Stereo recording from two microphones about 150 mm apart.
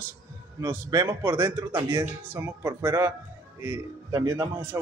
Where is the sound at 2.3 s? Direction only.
15° right (ahead or behind).